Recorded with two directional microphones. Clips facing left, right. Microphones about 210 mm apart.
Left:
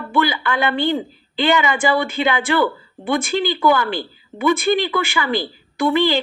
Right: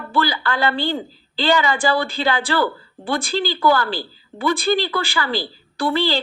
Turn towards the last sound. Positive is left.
turn(degrees=20)  # may be behind; listen again after turning